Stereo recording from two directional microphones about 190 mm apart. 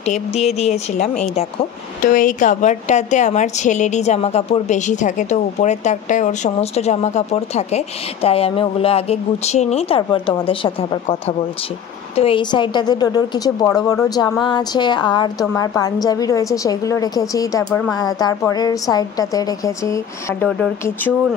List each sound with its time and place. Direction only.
0.0 s a woman's voice: 35° left (ahead or behind)
2.1 s a woman's voice: 45° left (ahead or behind); by 20.4 s 15° left (ahead or behind)